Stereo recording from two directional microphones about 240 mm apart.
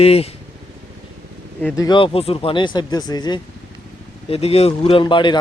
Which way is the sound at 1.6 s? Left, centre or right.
Centre.